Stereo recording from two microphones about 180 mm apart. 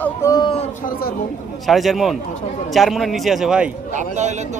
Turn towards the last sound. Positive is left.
turn(degrees=-40)  # may be behind; listen again after turning